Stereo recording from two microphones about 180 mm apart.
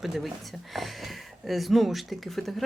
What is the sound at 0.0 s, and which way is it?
Speech, centre (ahead or behind).